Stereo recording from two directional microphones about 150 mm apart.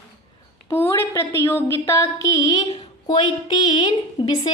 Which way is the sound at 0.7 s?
15° left (ahead or behind).